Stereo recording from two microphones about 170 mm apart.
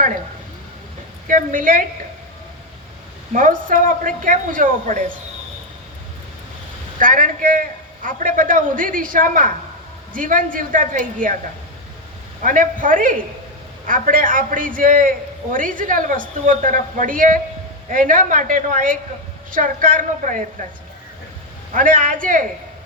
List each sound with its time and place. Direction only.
1.3 s a woman's voice: 50° right (ahead or behind)
3.3 s a woman's voice: 50° right (ahead or behind)
7.0 s a woman's voice: 55° right (ahead or behind)
12.4 s a woman's voice: 55° right (ahead or behind)
21.8 s a woman's voice: 50° right (ahead or behind)